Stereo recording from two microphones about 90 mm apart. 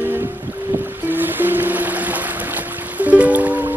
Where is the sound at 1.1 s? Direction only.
20° right (ahead or behind).